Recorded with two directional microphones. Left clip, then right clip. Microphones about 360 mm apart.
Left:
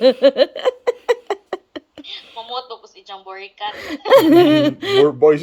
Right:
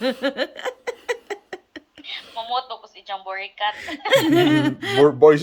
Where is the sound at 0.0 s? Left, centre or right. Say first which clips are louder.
Left 11 dB; centre.